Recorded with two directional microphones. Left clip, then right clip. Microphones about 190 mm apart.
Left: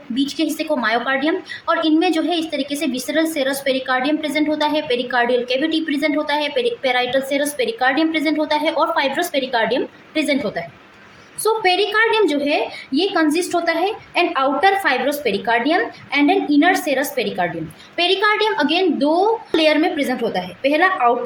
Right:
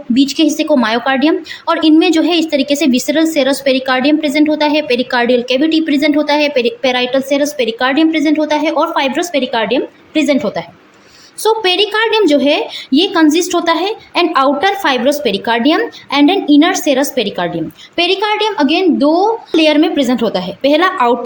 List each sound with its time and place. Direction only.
0.1 s a woman's voice: 35° right (ahead or behind)